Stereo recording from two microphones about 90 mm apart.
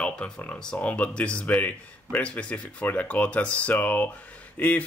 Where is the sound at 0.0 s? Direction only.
10° left (ahead or behind).